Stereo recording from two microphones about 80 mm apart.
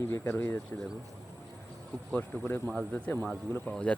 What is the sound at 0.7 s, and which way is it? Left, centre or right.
Speech, left.